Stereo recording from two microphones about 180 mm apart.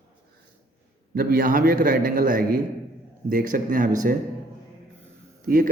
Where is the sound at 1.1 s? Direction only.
55° right (ahead or behind).